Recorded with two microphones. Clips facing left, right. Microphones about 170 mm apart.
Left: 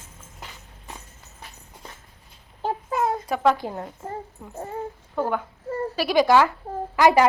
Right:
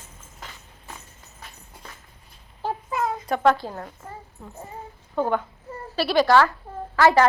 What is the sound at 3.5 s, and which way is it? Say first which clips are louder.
A child's voice: left 2 dB; 20° left (ahead or behind).